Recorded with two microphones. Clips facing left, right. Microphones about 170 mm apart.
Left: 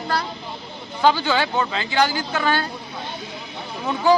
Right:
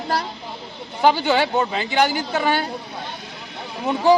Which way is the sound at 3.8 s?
20° right (ahead or behind).